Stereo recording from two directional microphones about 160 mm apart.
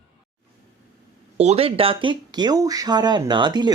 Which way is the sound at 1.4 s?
40° right (ahead or behind).